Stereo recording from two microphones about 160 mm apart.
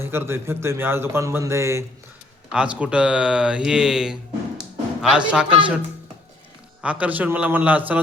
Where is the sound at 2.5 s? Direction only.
5° right (ahead or behind).